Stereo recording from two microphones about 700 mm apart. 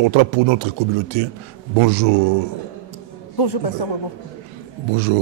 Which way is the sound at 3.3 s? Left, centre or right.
Left.